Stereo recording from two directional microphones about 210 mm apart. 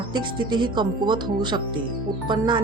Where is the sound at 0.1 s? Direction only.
20° right (ahead or behind).